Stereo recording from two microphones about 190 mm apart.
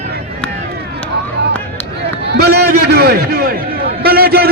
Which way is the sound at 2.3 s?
60° right (ahead or behind).